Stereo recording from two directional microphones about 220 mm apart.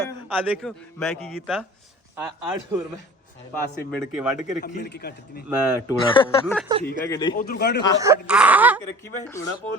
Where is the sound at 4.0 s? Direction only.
10° right (ahead or behind).